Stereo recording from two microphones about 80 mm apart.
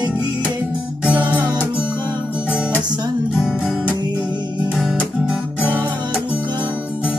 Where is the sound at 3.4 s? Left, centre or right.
Centre.